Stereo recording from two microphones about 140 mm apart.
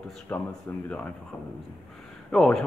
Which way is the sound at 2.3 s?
5° left (ahead or behind).